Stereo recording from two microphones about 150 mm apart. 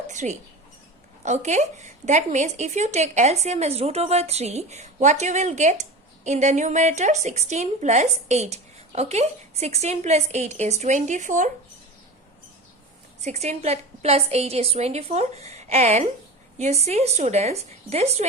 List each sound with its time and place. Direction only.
0.1 s a woman's voice: 55° right (ahead or behind)
13.2 s a woman's voice: 50° right (ahead or behind)